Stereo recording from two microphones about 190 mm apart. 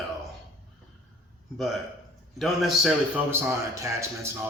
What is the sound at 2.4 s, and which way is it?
Speech, centre (ahead or behind).